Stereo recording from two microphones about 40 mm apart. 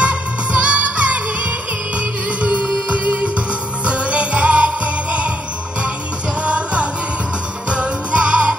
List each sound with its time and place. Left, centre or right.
0.0 s music: right
2.9 s music: right
6.4 s music: right